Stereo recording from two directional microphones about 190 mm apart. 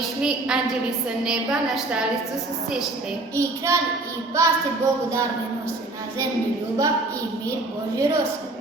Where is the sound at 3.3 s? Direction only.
15° right (ahead or behind).